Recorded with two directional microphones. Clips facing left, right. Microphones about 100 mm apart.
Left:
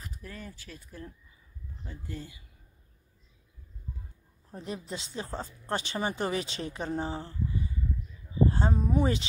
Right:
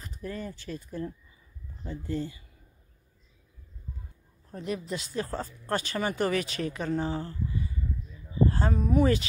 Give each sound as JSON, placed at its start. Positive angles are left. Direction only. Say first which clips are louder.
{"t": 0.0, "sound": "speech", "louder": "right 7 dB", "side_deg": 0}
{"t": 4.5, "sound": "speech", "louder": "right 4 dB", "side_deg": 30}
{"t": 8.5, "sound": "speech", "louder": "right 1 dB", "side_deg": 20}